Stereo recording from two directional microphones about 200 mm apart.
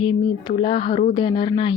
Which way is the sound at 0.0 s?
25° left (ahead or behind).